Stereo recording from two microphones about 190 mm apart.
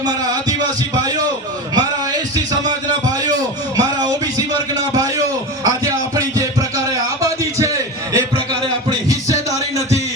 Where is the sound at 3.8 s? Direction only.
20° right (ahead or behind).